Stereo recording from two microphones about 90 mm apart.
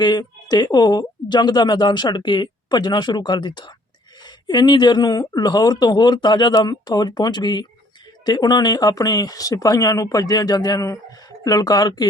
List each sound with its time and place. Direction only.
0.0 s speech: 50° left (ahead or behind)